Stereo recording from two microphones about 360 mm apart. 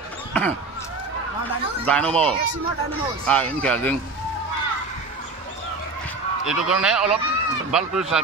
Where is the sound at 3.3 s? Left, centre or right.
Centre.